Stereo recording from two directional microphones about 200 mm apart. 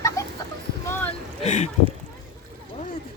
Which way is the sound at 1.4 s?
35° left (ahead or behind).